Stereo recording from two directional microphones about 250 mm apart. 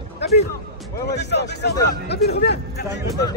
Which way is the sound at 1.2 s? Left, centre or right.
Left.